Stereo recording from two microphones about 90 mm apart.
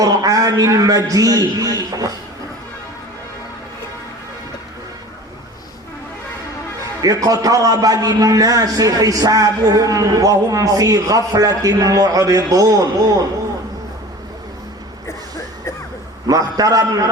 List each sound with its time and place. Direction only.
0.0 s a man's voice: 40° right (ahead or behind)
7.0 s a man's voice: 45° right (ahead or behind)
15.0 s a sound: 30° left (ahead or behind)
16.2 s a man's voice: 45° right (ahead or behind)